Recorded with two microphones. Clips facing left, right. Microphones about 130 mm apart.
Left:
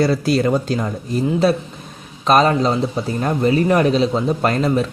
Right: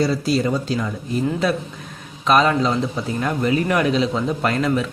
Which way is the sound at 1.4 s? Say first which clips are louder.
Left 4 dB; 30° left (ahead or behind).